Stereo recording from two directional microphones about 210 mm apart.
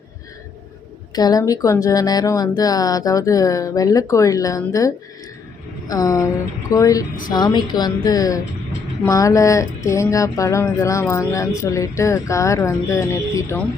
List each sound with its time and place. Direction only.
1.1 s a woman's voice: 20° left (ahead or behind)